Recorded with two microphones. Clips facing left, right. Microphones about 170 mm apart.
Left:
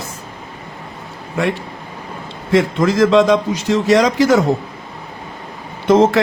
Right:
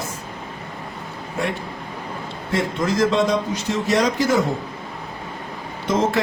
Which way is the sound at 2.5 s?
90° left.